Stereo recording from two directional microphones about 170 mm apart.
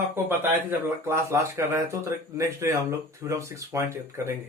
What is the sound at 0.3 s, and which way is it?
Speech, 15° right (ahead or behind).